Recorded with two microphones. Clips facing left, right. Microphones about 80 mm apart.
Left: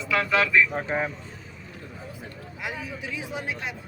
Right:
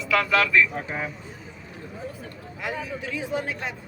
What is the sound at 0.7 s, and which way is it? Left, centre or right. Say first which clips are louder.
Speech: left 4 dB; left.